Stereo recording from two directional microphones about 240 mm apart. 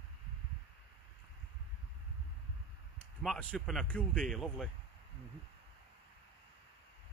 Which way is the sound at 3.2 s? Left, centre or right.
Centre.